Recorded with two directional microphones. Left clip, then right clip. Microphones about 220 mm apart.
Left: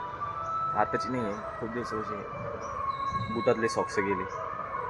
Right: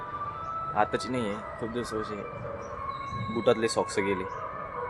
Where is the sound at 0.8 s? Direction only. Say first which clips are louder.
Right 5 dB; 10° right (ahead or behind).